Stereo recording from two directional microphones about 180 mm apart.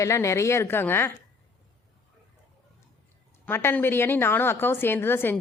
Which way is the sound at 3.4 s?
10° left (ahead or behind).